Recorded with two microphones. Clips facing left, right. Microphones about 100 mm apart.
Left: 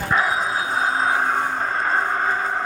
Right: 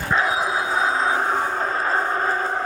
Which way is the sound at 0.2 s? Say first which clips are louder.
Even; 5° right (ahead or behind).